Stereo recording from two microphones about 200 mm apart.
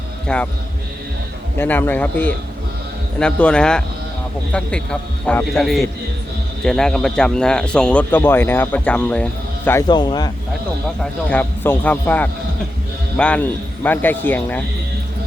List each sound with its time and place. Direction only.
0.3 s speech: 5° left (ahead or behind)
1.5 s speech: 10° left (ahead or behind)
9.8 s speech: 20° left (ahead or behind)
10.8 s speech: 5° left (ahead or behind)